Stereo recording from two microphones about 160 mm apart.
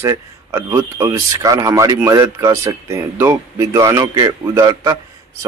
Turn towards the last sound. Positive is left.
turn(degrees=-25)  # may be behind; listen again after turning